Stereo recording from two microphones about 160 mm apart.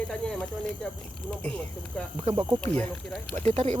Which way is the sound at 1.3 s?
5° left (ahead or behind).